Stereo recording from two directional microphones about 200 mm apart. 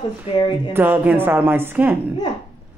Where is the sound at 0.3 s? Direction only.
30° left (ahead or behind).